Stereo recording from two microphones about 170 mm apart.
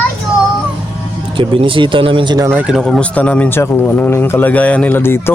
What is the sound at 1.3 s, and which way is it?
Speech, 30° right (ahead or behind).